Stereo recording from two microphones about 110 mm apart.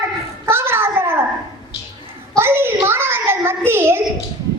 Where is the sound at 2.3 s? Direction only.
20° right (ahead or behind).